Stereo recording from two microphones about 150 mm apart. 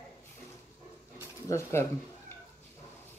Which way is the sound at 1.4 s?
20° left (ahead or behind).